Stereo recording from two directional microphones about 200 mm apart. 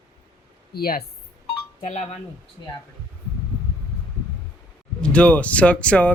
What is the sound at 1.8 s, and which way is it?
Speech, 35° left (ahead or behind).